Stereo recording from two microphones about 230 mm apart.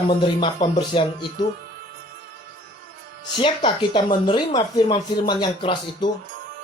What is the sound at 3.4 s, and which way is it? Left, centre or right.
Speech, left.